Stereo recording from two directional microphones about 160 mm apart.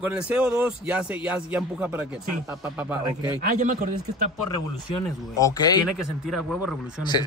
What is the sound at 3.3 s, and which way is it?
Speech, 55° right (ahead or behind).